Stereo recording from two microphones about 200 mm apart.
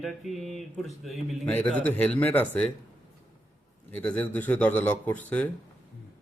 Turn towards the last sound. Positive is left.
turn(degrees=10)  # may be behind; listen again after turning